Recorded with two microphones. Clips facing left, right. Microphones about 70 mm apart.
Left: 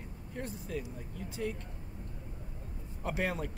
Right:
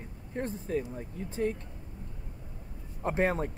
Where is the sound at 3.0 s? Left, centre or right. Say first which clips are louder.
Right 6 dB; right.